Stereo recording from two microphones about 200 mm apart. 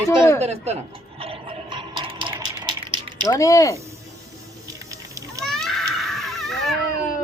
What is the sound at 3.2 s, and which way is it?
Speech, 15° left (ahead or behind).